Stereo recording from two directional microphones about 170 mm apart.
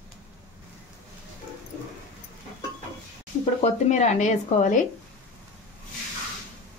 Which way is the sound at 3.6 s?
45° left (ahead or behind).